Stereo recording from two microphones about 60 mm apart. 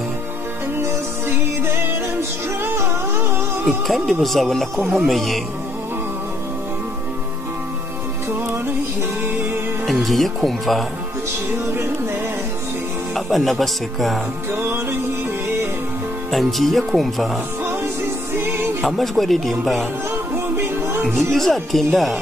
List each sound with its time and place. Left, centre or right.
0.7 s music: right
3.6 s speech: centre
9.2 s music: right
9.8 s speech: centre
13.1 s speech: centre
14.6 s music: right
16.3 s speech: centre
18.3 s music: right
18.8 s speech: centre
20.5 s music: right
21.3 s speech: centre